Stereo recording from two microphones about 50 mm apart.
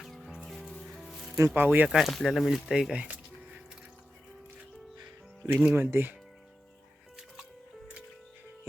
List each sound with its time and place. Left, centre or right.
0.0 s music: centre
1.5 s speech: right
1.9 s speech: centre
2.9 s music: right
5.5 s speech: right